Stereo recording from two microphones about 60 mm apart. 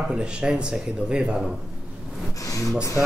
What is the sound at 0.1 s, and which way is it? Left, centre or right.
Speech, centre.